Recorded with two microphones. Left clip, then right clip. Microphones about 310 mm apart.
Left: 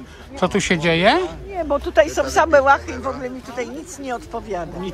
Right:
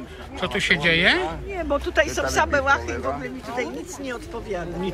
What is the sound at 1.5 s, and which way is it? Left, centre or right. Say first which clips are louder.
A man's voice: left 5 dB; left.